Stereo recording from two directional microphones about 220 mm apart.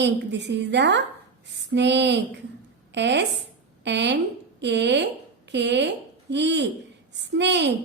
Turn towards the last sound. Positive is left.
turn(degrees=-50)  # may be behind; listen again after turning